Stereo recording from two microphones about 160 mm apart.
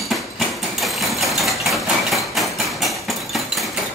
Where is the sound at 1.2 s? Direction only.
Centre (ahead or behind).